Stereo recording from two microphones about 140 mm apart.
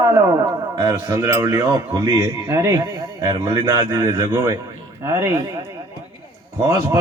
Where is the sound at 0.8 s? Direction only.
20° right (ahead or behind).